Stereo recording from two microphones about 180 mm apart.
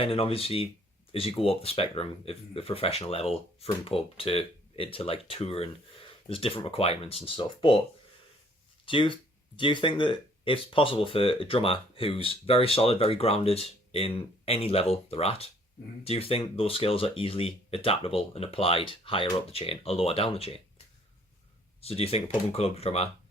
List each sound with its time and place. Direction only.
0.0 s speech: 30° left (ahead or behind)
8.9 s speech: 30° left (ahead or behind)